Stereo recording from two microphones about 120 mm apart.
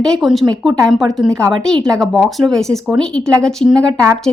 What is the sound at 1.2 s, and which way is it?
Speech, 25° right (ahead or behind).